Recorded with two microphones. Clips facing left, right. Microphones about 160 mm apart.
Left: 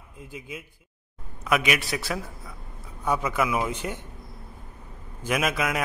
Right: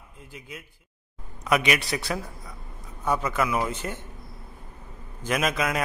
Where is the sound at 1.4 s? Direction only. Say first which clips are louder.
Right 1 dB; centre (ahead or behind).